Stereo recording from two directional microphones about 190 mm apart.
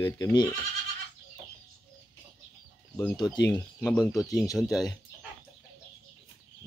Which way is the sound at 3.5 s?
5° left (ahead or behind).